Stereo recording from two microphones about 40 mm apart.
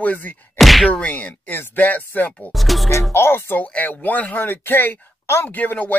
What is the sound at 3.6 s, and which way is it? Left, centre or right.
Speech, left.